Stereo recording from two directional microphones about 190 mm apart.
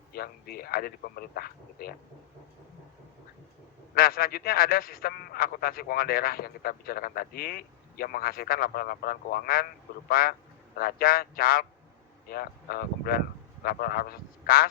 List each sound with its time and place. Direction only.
0.1 s a man's voice: 55° left (ahead or behind)
3.9 s a man's voice: 50° left (ahead or behind)